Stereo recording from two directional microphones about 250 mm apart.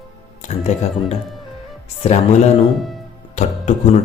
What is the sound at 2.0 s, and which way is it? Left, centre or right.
Speech, left.